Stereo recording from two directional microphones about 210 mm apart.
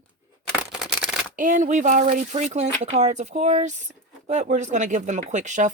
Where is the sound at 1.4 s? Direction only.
35° right (ahead or behind).